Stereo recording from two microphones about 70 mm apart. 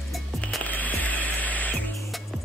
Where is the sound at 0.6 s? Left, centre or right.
Left.